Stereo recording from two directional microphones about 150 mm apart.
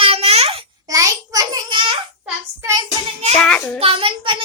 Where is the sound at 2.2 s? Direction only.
20° right (ahead or behind).